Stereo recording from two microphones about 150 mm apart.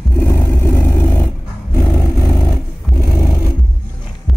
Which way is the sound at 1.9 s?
20° left (ahead or behind).